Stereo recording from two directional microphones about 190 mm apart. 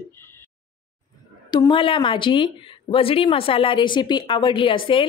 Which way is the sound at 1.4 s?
20° left (ahead or behind).